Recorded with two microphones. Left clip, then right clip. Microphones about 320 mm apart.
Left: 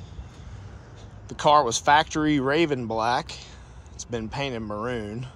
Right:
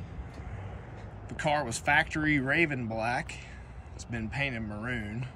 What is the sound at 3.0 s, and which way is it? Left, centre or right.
Speech, left.